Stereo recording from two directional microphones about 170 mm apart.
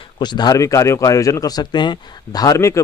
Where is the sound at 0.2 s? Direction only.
25° left (ahead or behind).